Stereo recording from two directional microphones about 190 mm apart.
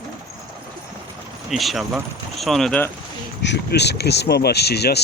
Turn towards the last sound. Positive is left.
turn(degrees=60)  # may be behind; listen again after turning